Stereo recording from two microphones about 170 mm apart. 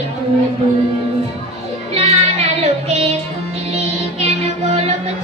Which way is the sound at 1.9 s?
40° right (ahead or behind).